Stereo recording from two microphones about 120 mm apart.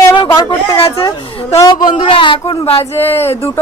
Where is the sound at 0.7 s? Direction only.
50° left (ahead or behind).